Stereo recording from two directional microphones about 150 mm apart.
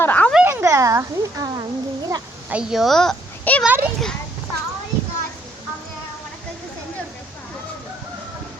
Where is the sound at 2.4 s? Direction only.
5° right (ahead or behind).